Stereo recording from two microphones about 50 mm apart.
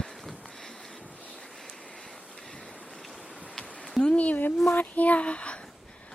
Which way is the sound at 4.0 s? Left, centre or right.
Left.